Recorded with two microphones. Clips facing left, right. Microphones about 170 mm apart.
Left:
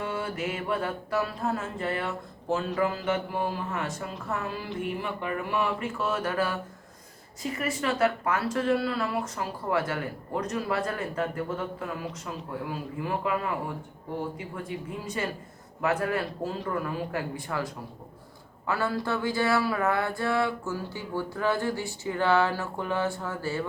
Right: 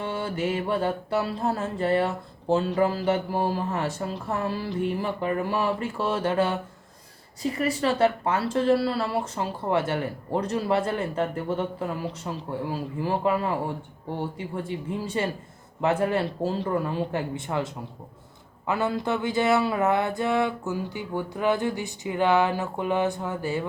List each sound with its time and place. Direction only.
0.0 s mantra: 30° right (ahead or behind)
7.4 s speech: 35° right (ahead or behind); by 23.6 s 15° right (ahead or behind)